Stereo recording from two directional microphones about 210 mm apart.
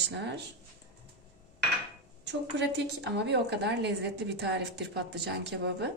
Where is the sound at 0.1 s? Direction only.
55° right (ahead or behind).